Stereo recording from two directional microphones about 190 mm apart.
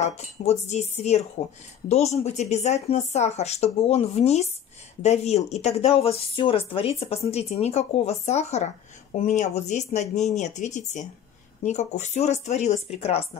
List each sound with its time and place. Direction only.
0.0 s speech: 35° left (ahead or behind)